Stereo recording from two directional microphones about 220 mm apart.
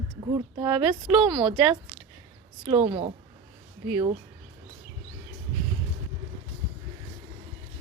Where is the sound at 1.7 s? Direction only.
Centre (ahead or behind).